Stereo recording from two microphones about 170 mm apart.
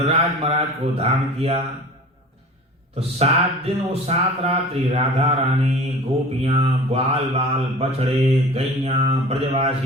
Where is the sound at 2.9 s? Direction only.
35° right (ahead or behind).